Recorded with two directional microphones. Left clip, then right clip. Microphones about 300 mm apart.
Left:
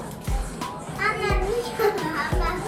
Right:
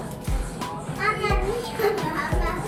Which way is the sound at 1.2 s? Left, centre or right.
Centre.